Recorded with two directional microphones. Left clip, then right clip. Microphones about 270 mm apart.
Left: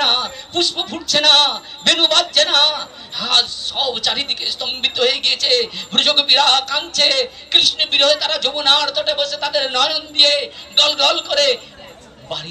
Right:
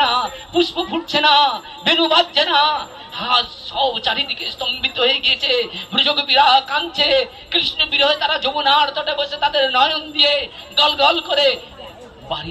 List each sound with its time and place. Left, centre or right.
0.0 s a sound: centre
1.1 s a man's voice: centre
10.9 s a man's voice: centre